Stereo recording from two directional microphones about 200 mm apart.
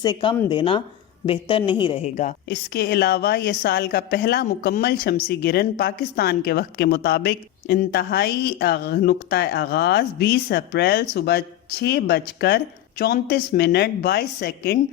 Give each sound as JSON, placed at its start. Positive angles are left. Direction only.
{"t": 0.0, "sound": "speech", "side_deg": 20}
{"t": 2.5, "sound": "a woman's voice", "side_deg": 55}